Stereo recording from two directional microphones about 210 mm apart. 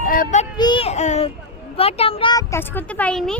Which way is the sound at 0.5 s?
20° left (ahead or behind).